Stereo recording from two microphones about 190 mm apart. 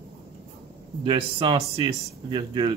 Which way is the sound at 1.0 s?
25° right (ahead or behind).